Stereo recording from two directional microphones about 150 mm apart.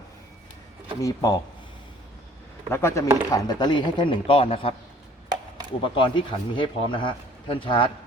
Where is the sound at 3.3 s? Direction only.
25° left (ahead or behind).